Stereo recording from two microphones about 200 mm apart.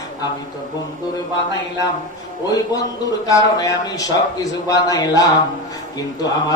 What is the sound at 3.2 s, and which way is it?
A man's voice, 15° left (ahead or behind).